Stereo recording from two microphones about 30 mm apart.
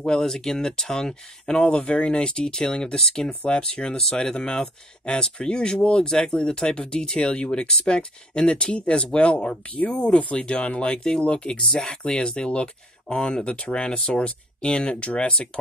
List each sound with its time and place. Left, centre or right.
0.2 s speech: centre
1.4 s speech: left
2.4 s speech: centre
3.7 s speech: left
11.7 s speech: left
13.9 s speech: left